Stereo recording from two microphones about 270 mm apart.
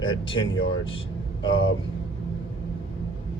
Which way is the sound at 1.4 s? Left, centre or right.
Left.